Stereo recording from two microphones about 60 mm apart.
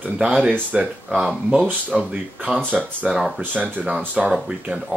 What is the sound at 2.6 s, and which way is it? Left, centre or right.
Speech, right.